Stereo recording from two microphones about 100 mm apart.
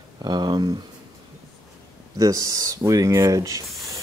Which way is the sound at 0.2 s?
45° right (ahead or behind).